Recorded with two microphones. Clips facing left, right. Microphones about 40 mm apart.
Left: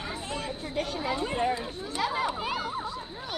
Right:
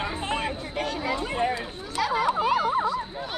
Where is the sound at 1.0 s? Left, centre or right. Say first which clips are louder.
Right 1 dB; right.